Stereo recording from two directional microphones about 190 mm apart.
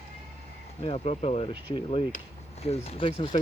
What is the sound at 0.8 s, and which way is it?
Speech, 35° left (ahead or behind).